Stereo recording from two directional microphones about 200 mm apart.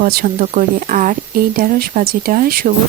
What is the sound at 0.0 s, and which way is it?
Speech, 45° right (ahead or behind).